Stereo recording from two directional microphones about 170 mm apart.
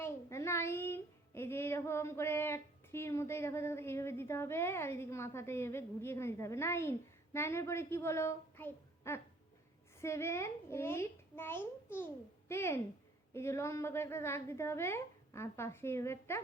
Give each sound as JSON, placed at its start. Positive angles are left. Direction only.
{"t": 0.0, "sound": "a woman's voice", "side_deg": 15}